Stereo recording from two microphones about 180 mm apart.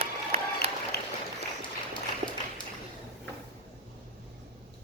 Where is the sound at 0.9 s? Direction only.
65° left (ahead or behind).